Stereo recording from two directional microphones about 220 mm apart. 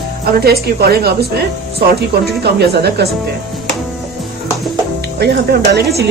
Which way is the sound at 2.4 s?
50° right (ahead or behind).